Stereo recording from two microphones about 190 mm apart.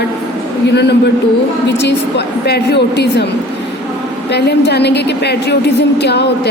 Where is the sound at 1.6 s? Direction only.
65° left (ahead or behind).